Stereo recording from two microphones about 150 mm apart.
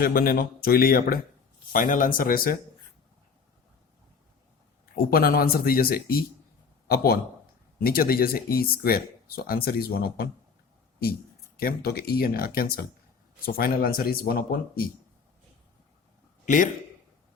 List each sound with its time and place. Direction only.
0.0 s a man's voice: 75° left (ahead or behind)
1.7 s speech: 60° left (ahead or behind)
4.9 s a man's voice: 85° left
11.5 s speech: 90° left
16.5 s speech: 55° left (ahead or behind)